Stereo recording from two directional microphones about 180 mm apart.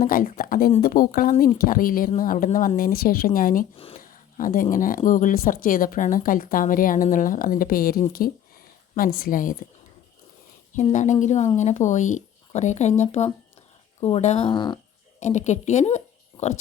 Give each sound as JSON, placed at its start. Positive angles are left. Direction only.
{"t": 0.0, "sound": "speech", "side_deg": 50}
{"t": 9.1, "sound": "speech", "side_deg": 50}
{"t": 10.9, "sound": "speech", "side_deg": 45}
{"t": 15.2, "sound": "speech", "side_deg": 40}